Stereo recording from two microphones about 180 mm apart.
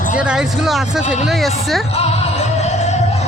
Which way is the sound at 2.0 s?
35° left (ahead or behind).